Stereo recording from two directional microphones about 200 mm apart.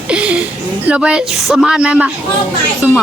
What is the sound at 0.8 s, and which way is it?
A woman's voice, 5° right (ahead or behind).